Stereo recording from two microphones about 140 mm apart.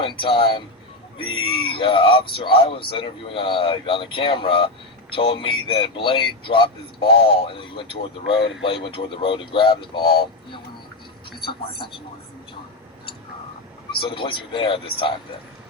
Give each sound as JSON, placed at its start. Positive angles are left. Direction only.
{"t": 0.0, "sound": "speech", "side_deg": 35}
{"t": 14.0, "sound": "speech", "side_deg": 35}